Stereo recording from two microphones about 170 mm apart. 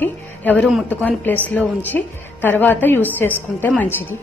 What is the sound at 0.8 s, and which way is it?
A woman's voice, 10° left (ahead or behind).